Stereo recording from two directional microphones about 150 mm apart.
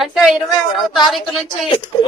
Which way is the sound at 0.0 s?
Centre (ahead or behind).